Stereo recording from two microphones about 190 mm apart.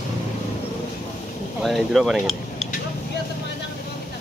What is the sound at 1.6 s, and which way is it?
Speech, centre (ahead or behind).